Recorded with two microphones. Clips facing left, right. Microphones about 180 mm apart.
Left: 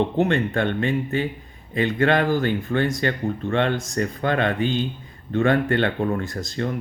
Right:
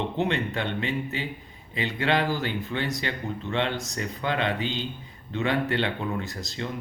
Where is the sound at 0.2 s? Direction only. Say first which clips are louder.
Left 4 dB; 50° left (ahead or behind).